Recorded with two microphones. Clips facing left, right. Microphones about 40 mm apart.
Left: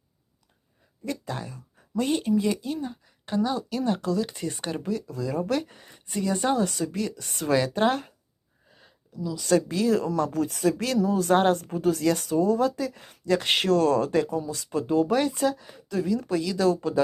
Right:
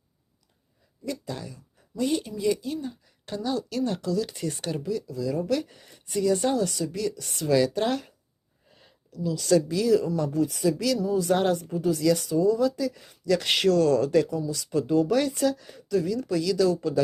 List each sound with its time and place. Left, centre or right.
1.0 s speech: left
3.2 s speech: left
4.0 s speech: left
4.8 s speech: left
9.1 s speech: left
9.5 s speech: left
10.2 s speech: left
14.3 s speech: left